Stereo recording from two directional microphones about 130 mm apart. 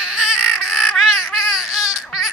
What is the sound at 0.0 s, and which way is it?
Baby cry, 5° right (ahead or behind).